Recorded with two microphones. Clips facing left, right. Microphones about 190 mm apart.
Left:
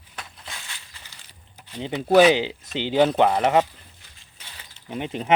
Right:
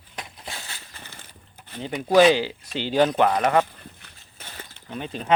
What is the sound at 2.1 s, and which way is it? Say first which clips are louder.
Speech: left 1 dB; 15° left (ahead or behind).